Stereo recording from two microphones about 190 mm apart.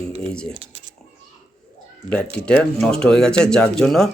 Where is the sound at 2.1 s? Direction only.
5° left (ahead or behind).